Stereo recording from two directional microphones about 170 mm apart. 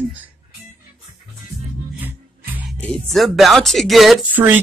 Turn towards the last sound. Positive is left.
turn(degrees=-10)  # may be behind; listen again after turning